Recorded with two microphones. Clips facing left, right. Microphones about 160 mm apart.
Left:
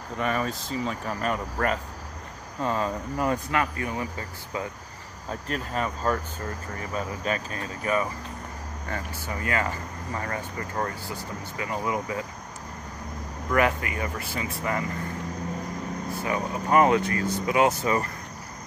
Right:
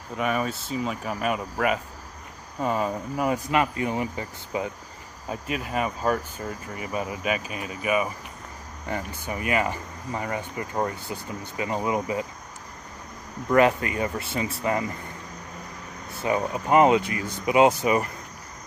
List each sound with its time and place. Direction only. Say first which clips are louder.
0.2 s speech: right 1 dB; 5° right (ahead or behind)
3.5 s speech: right 3 dB; 20° right (ahead or behind)
13.5 s speech: right 4 dB; 25° right (ahead or behind)
16.2 s speech: right 5 dB; 20° right (ahead or behind)